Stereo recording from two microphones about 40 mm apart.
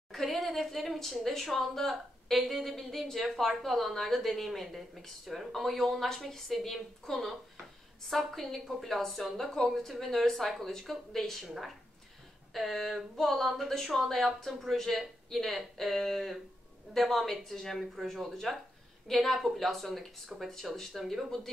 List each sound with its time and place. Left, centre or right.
0.1 s a sound: centre
1.2 s a woman's voice: centre
11.4 s a woman's voice: centre
12.5 s a woman's voice: centre